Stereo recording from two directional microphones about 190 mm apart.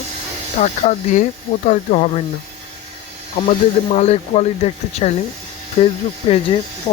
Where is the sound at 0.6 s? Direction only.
40° left (ahead or behind).